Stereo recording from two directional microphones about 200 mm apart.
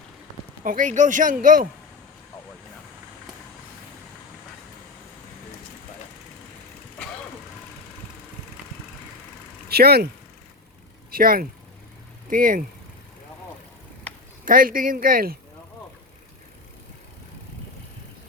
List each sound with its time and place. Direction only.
0.6 s speech: 40° right (ahead or behind)
9.6 s speech: 50° right (ahead or behind)
11.1 s speech: 45° right (ahead or behind)
14.4 s speech: 45° right (ahead or behind)